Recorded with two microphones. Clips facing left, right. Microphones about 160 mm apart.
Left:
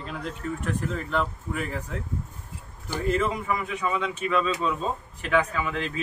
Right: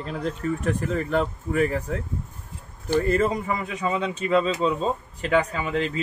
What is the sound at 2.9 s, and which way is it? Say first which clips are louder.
Speech: right 4 dB; 40° right (ahead or behind).